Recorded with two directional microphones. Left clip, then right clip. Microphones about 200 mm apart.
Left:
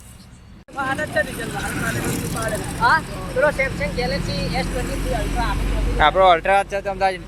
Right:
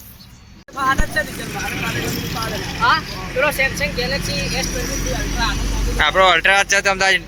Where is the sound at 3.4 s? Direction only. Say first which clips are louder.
Right 2 dB; 45° right (ahead or behind).